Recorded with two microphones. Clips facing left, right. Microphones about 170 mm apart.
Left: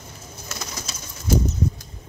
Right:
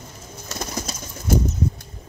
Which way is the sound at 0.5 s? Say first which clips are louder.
Right 6 dB; 45° right (ahead or behind).